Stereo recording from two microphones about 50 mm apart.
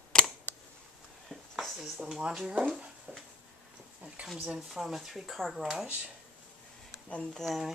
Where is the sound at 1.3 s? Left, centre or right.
Centre.